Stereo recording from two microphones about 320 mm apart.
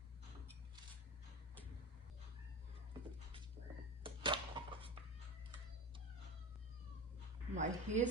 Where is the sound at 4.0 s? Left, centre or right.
Centre.